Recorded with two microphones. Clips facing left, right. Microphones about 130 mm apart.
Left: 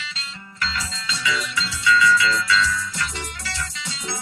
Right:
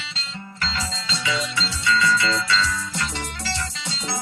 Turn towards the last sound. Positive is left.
turn(degrees=-30)  # may be behind; listen again after turning